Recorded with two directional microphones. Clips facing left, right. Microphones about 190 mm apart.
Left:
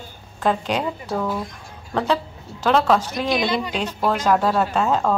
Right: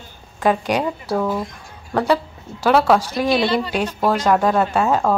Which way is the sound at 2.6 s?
10° right (ahead or behind).